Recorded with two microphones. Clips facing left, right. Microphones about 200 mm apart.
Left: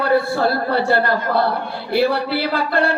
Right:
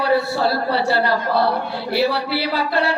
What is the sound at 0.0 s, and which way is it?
Speech, 50° left (ahead or behind).